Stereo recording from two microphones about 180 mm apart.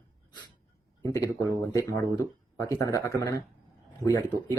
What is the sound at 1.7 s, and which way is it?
Speech, 15° left (ahead or behind).